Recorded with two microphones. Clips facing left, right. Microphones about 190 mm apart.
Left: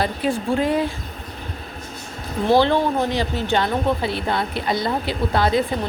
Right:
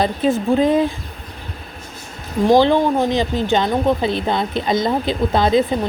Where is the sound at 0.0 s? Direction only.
20° right (ahead or behind).